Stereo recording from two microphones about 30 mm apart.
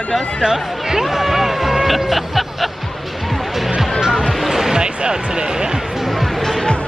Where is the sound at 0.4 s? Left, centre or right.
Centre.